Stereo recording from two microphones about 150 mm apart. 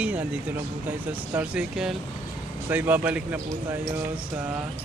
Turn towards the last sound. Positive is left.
turn(degrees=-10)  # may be behind; listen again after turning